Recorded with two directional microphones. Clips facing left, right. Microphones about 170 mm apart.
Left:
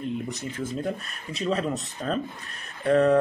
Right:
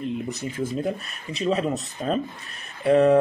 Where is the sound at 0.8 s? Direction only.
Centre (ahead or behind).